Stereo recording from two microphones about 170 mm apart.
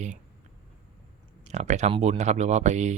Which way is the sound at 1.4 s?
40° right (ahead or behind).